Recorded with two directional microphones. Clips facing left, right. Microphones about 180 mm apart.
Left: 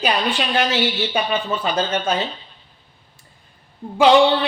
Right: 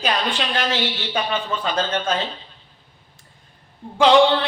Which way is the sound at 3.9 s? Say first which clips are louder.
Left 1 dB; 10° left (ahead or behind).